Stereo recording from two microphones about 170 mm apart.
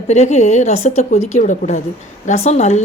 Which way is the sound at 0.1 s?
40° left (ahead or behind).